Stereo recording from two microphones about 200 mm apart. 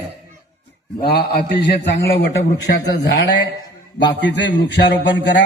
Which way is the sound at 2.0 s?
55° left (ahead or behind).